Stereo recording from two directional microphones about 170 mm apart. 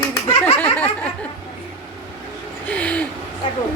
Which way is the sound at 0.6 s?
10° left (ahead or behind).